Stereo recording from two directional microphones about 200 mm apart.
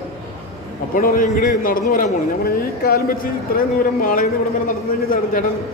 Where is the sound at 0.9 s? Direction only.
45° left (ahead or behind).